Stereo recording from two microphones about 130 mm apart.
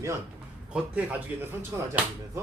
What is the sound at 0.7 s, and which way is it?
Speech, 10° right (ahead or behind).